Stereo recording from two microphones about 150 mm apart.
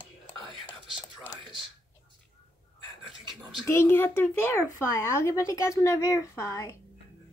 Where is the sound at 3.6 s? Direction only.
15° left (ahead or behind).